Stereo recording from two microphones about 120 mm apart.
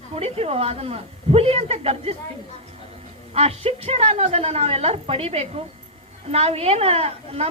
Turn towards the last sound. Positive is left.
turn(degrees=-55)  # may be behind; listen again after turning